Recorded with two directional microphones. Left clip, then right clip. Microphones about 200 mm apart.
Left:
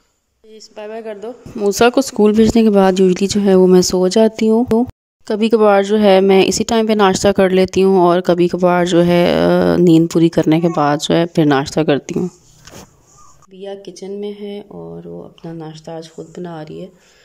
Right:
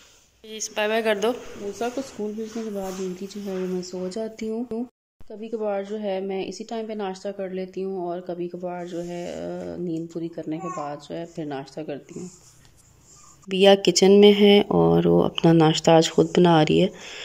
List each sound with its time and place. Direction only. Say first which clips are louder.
0.6 s a woman's voice: right 5 dB; 15° left (ahead or behind)
1.7 s a woman's voice: left 17 dB; 50° left (ahead or behind)
5.3 s a woman's voice: left 16 dB; 50° left (ahead or behind)
13.5 s speech: right 13 dB; 20° right (ahead or behind)